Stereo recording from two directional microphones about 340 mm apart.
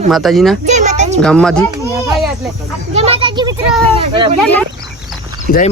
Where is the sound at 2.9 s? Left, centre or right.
Centre.